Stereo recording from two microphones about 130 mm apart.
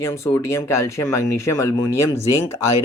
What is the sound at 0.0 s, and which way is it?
Speech, 20° left (ahead or behind).